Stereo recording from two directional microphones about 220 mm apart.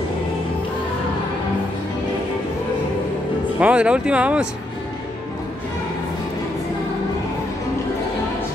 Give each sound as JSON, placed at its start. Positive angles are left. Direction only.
{"t": 3.5, "sound": "speech", "side_deg": -5}